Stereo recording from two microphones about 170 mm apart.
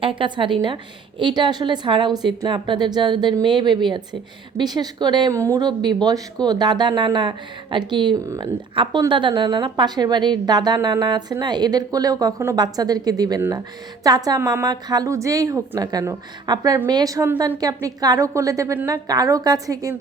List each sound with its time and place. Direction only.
0.0 s a woman's voice: 30° right (ahead or behind)